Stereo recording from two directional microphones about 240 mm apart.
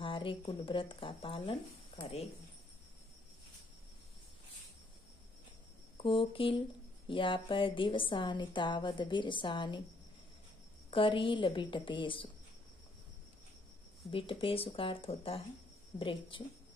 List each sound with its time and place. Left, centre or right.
0.0 s a woman's voice: left
5.9 s a woman's voice: left
10.9 s a woman's voice: left
14.1 s a woman's voice: left